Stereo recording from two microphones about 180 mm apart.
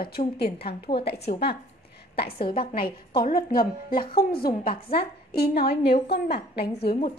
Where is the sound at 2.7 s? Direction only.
55° left (ahead or behind).